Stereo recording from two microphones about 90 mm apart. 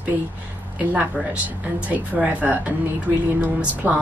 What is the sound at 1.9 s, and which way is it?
A woman's voice, 15° right (ahead or behind).